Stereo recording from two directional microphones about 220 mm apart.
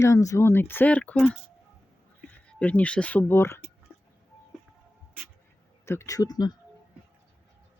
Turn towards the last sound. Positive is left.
turn(degrees=15)  # may be behind; listen again after turning